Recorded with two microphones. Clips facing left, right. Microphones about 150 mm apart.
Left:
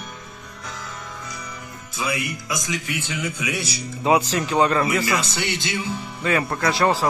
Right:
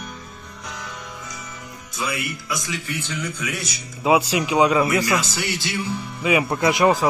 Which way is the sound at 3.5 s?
30° left (ahead or behind).